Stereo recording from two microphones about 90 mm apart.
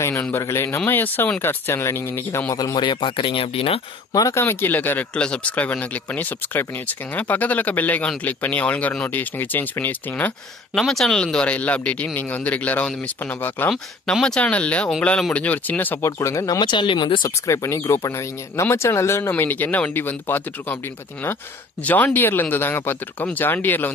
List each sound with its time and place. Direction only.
0.4 s speech: 30° left (ahead or behind)
2.5 s speech: 45° left (ahead or behind); by 3.8 s 90° left
4.1 s speech: 40° left (ahead or behind)
4.4 s speech: 25° left (ahead or behind)
10.7 s speech: 5° left (ahead or behind); by 16.1 s 20° left (ahead or behind)
16.1 s speech: 35° left (ahead or behind)
16.5 s speech: 60° left (ahead or behind)
17.5 s speech: 35° left (ahead or behind)
21.8 s speech: 20° left (ahead or behind)